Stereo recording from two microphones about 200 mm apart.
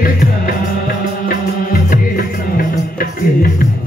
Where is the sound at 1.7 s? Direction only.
45° left (ahead or behind).